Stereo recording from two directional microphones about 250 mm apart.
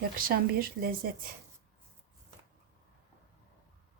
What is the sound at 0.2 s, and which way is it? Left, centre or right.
A woman's voice, right.